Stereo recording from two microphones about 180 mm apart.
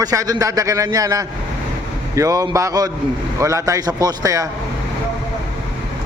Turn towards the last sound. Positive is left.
turn(degrees=-20)  # may be behind; listen again after turning